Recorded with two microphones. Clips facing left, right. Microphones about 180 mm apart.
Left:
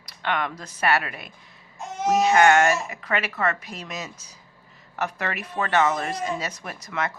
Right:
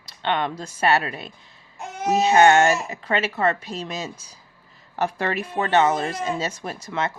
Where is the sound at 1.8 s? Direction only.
60° right (ahead or behind).